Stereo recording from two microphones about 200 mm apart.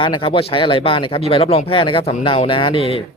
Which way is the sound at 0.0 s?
25° left (ahead or behind).